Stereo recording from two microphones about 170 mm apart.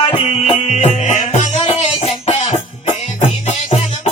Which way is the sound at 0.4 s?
40° left (ahead or behind).